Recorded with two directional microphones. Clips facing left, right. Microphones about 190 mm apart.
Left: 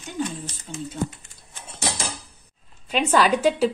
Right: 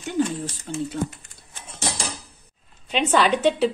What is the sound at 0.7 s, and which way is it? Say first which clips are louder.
Speech: right 6 dB; 70° right (ahead or behind).